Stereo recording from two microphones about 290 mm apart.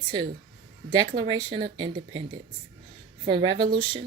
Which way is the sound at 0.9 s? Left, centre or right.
Centre.